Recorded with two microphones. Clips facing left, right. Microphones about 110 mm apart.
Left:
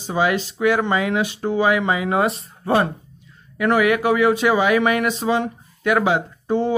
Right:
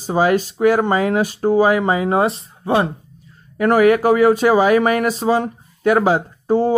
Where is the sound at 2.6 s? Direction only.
20° right (ahead or behind).